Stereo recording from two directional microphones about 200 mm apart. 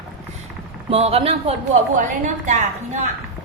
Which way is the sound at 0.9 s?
30° right (ahead or behind).